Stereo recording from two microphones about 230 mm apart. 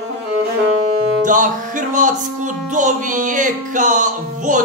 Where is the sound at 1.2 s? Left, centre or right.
Right.